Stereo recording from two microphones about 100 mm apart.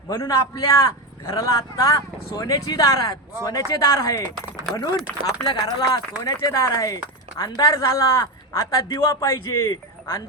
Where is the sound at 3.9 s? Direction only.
30° left (ahead or behind).